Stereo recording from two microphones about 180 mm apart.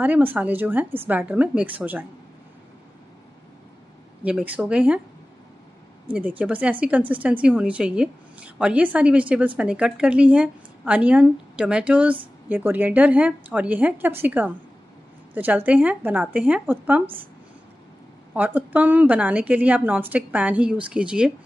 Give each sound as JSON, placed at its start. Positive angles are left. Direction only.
{"t": 0.0, "sound": "a woman's voice", "side_deg": -10}
{"t": 4.2, "sound": "a woman's voice", "side_deg": -10}
{"t": 6.0, "sound": "a woman's voice", "side_deg": -10}
{"t": 18.3, "sound": "a woman's voice", "side_deg": -10}